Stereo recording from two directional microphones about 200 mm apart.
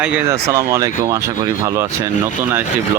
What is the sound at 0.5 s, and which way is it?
Speech, 15° right (ahead or behind).